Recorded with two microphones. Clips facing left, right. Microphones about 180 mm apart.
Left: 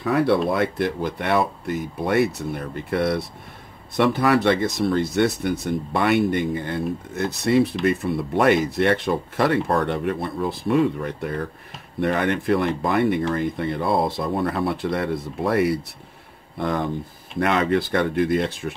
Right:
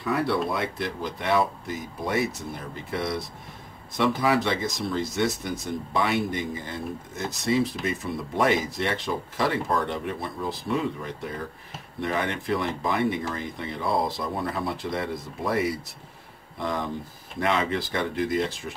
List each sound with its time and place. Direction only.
0.0 s speech: 60° left (ahead or behind)